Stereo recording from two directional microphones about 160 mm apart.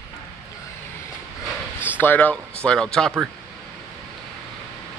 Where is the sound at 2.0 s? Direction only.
10° left (ahead or behind).